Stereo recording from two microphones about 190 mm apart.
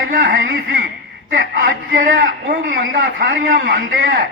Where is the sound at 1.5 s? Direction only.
55° right (ahead or behind).